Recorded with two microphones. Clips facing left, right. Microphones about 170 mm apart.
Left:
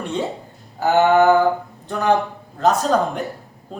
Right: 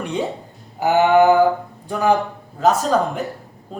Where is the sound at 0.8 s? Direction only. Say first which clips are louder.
Right 1 dB; 15° right (ahead or behind).